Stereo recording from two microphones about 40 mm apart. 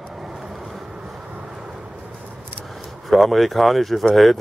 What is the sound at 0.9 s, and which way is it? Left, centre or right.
Vehicle, right.